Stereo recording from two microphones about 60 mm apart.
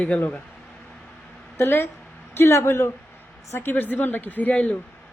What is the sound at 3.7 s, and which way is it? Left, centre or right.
Speech, left.